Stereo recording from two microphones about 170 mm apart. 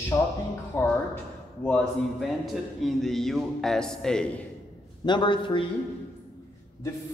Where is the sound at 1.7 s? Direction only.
5° left (ahead or behind).